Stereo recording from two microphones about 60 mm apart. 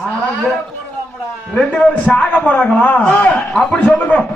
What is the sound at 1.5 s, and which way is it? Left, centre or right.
A man's voice, centre.